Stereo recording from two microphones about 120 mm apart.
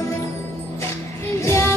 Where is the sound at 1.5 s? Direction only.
25° left (ahead or behind).